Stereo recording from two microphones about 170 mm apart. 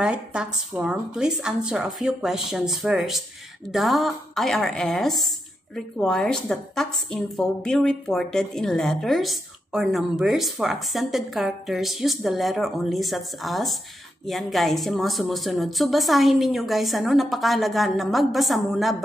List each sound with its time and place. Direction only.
0.0 s a woman's voice: 5° right (ahead or behind)